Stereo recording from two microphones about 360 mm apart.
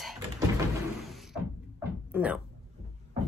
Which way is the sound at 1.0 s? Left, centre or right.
Centre.